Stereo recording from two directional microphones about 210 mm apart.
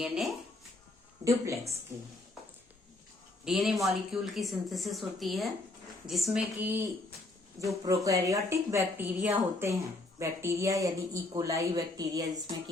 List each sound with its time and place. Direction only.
1.2 s speech: 15° right (ahead or behind)
3.4 s speech: centre (ahead or behind)
7.9 s speech: 15° right (ahead or behind)